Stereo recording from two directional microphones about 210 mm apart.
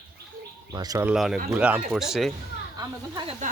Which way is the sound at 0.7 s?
20° right (ahead or behind).